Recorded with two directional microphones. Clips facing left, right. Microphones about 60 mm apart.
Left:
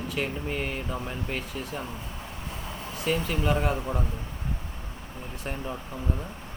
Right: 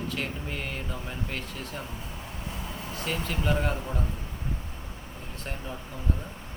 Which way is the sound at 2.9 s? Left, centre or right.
Centre.